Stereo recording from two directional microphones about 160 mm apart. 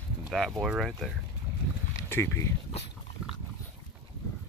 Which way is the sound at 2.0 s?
15° left (ahead or behind).